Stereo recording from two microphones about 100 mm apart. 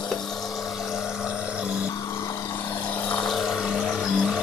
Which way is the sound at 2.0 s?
30° left (ahead or behind).